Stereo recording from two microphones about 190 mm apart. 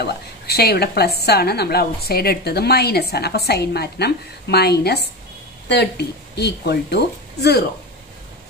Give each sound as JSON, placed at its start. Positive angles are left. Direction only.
{"t": 0.0, "sound": "a woman's voice", "side_deg": 55}